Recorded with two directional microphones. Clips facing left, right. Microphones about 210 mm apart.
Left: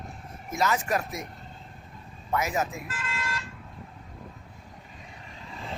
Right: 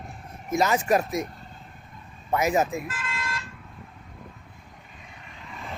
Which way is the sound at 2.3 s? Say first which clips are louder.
Right 5 dB; 20° right (ahead or behind).